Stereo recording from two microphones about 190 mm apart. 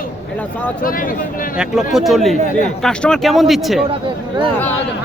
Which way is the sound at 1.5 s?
5° right (ahead or behind).